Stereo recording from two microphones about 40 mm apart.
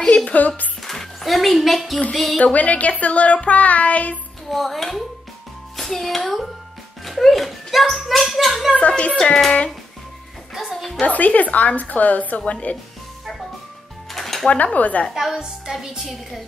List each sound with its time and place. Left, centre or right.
0.0 s speech: left
0.8 s a child's voice: centre
2.4 s speech: left
4.5 s a child's voice: centre
8.7 s speech: left
10.5 s music: centre
11.0 s speech: left
12.4 s speech: left
14.1 s music: centre
14.5 s speech: left
15.3 s a woman's voice: centre